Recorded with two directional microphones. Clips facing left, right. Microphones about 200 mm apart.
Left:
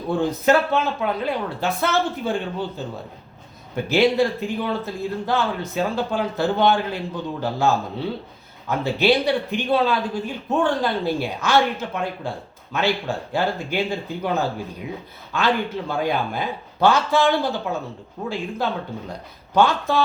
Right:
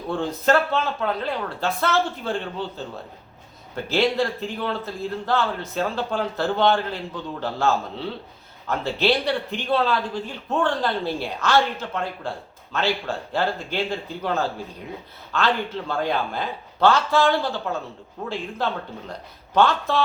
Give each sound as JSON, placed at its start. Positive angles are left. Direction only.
{"t": 0.1, "sound": "a man's voice", "side_deg": 15}
{"t": 18.2, "sound": "speech", "side_deg": 0}
{"t": 19.5, "sound": "a man's voice", "side_deg": 15}